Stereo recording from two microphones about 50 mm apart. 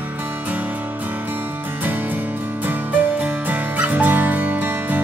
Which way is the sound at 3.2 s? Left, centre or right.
Right.